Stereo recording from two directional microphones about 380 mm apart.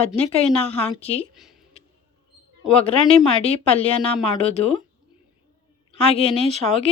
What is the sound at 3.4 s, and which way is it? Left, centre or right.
A woman's voice, centre.